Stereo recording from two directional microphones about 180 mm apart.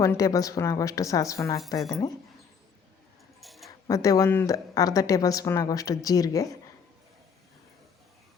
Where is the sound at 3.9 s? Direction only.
20° left (ahead or behind).